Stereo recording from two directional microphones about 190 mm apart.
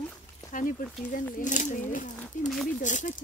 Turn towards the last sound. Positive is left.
turn(degrees=40)  # may be behind; listen again after turning